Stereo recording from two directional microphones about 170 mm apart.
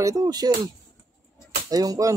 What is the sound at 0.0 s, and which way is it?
Speech, 20° right (ahead or behind).